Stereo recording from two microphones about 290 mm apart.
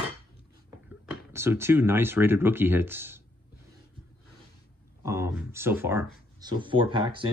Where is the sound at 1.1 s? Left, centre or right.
Centre.